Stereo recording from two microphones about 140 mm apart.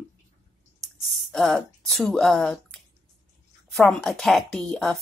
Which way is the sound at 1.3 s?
Centre (ahead or behind).